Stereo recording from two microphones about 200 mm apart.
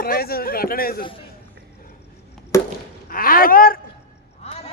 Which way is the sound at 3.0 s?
45° left (ahead or behind).